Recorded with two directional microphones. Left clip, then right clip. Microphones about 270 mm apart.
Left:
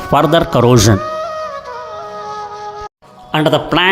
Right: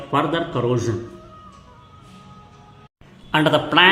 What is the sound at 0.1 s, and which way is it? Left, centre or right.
Speech, left.